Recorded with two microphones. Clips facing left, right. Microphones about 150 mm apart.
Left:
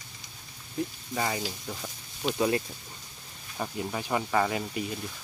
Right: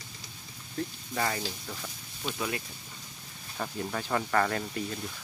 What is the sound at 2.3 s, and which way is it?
Speech, 30° left (ahead or behind).